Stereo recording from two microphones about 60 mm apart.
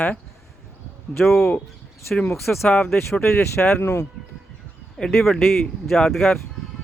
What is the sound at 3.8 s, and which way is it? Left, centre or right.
Speech, left.